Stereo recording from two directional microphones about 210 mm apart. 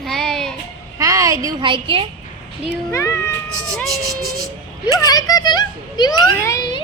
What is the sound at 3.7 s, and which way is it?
Speech, centre (ahead or behind).